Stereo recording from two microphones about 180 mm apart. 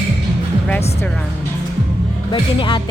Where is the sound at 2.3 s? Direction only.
25° left (ahead or behind).